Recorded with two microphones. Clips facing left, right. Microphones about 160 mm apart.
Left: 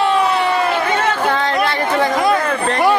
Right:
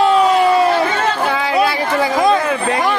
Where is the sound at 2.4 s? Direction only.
10° right (ahead or behind).